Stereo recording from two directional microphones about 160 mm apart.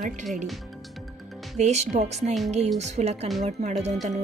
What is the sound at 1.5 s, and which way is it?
Speech, 45° right (ahead or behind).